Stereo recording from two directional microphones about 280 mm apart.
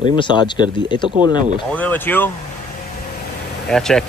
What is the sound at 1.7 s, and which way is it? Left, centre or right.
Speech, centre.